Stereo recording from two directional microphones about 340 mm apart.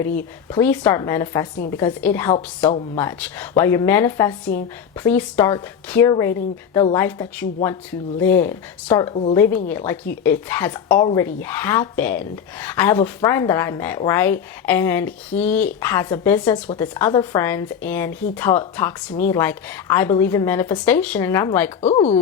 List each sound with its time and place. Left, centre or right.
0.0 s speech: centre
9.1 s speech: centre
9.6 s speech: centre
21.8 s speech: centre